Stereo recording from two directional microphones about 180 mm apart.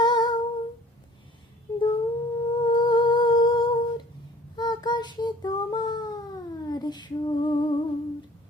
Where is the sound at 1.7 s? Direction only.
20° left (ahead or behind).